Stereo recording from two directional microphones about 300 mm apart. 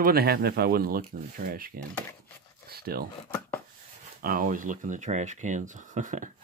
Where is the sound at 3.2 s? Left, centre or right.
Centre.